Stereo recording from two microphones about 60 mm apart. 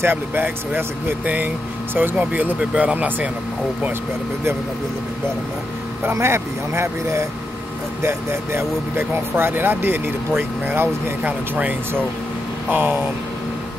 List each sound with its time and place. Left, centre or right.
0.0 s speech: right
1.2 s speech: right
6.1 s speech: right
12.7 s speech: right